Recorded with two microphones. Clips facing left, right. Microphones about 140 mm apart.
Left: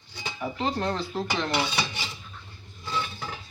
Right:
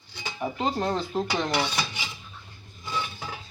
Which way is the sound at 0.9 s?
15° right (ahead or behind).